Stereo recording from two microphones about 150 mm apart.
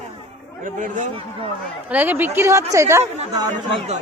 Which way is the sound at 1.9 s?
10° right (ahead or behind).